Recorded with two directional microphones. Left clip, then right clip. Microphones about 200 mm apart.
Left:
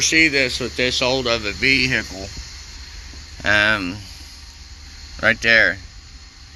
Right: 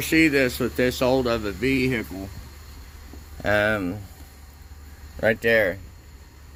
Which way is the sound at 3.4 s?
20° right (ahead or behind).